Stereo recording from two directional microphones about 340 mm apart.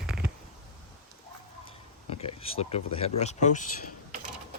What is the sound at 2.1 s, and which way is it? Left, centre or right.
Speech, centre.